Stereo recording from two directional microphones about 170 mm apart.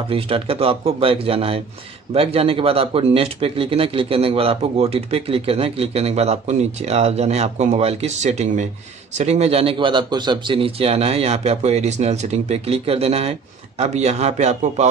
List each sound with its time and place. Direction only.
0.1 s speech: 35° right (ahead or behind)